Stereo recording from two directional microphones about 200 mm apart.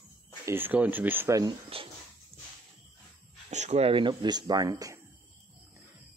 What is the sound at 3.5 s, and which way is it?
Speech, 35° right (ahead or behind).